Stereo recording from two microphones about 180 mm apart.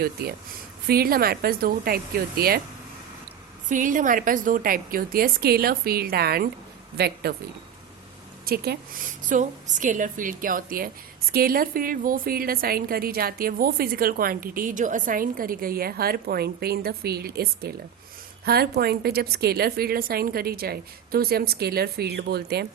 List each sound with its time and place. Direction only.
0.0 s a woman's voice: 55° right (ahead or behind)
3.7 s a woman's voice: 45° right (ahead or behind); by 7.3 s 60° right (ahead or behind)
8.4 s a woman's voice: 60° right (ahead or behind)
9.2 s a woman's voice: 45° right (ahead or behind); by 22.6 s 65° right (ahead or behind)